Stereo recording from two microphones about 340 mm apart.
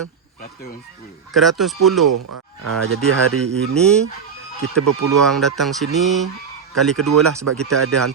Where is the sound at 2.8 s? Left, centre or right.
Right.